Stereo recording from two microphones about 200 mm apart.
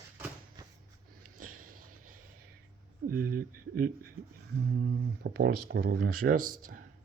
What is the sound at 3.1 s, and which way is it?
Speech, 45° right (ahead or behind).